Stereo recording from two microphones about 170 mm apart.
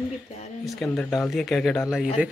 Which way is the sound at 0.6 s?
Centre (ahead or behind).